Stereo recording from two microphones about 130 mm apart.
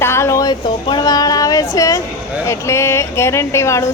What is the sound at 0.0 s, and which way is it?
A woman's voice, 20° left (ahead or behind).